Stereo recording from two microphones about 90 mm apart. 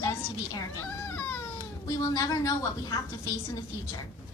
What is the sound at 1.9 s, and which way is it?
A woman's voice, 40° left (ahead or behind).